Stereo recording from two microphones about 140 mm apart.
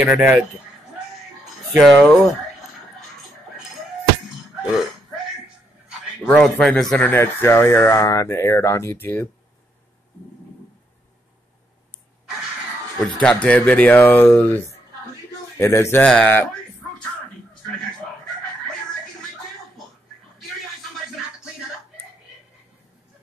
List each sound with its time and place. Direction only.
0.0 s speech: 5° right (ahead or behind)
1.8 s speech: 5° left (ahead or behind)
5.9 s a man's voice: 5° left (ahead or behind)
7.1 s speech: 15° left (ahead or behind)
13.0 s speech: 5° left (ahead or behind)